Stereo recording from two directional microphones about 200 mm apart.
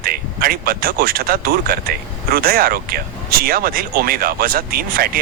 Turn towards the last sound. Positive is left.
turn(degrees=-50)  # may be behind; listen again after turning